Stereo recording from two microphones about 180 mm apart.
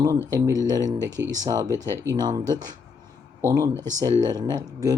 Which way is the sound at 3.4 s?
20° right (ahead or behind).